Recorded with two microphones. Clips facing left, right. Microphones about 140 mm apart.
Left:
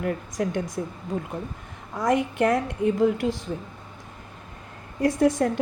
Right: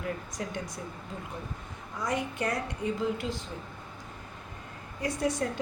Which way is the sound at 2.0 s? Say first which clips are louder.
Left 9 dB; 50° left (ahead or behind).